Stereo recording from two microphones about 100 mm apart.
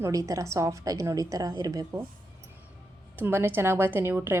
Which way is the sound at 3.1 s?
25° right (ahead or behind).